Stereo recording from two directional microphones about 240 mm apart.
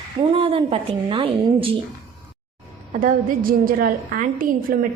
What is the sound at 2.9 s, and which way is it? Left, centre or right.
A woman's voice, right.